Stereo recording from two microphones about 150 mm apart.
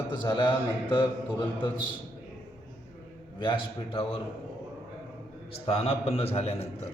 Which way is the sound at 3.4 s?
35° left (ahead or behind).